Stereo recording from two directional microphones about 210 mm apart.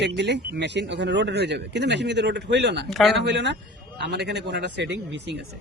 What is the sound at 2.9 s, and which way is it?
Speech, centre (ahead or behind).